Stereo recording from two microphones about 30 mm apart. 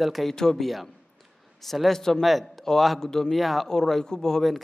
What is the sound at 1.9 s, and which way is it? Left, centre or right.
Speech, centre.